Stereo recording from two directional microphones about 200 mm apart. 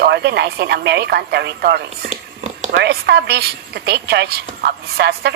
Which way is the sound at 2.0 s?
35° right (ahead or behind).